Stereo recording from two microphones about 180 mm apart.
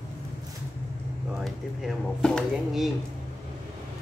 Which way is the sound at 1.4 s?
Centre (ahead or behind).